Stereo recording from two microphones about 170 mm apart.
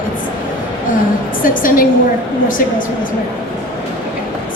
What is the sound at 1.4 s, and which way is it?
Speech, 55° left (ahead or behind).